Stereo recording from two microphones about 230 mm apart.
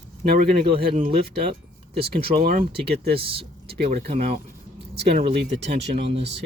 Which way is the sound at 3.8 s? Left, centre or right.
Right.